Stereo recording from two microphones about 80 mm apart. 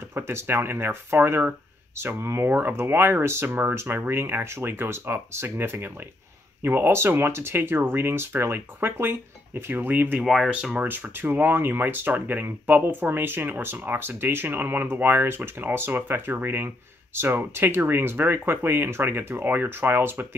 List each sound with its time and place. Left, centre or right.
0.1 s speech: right
10.2 s speech: centre
10.5 s speech: centre
10.9 s speech: right